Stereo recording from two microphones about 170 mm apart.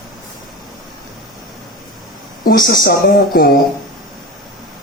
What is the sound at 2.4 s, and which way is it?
Speech, 55° left (ahead or behind).